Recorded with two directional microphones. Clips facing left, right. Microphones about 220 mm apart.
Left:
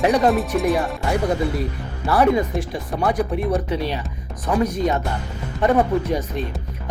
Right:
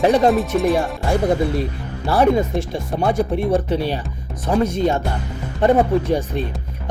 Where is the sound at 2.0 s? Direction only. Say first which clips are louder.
Right 1 dB; 25° right (ahead or behind).